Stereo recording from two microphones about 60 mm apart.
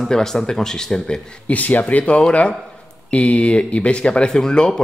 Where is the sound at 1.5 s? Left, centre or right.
Left.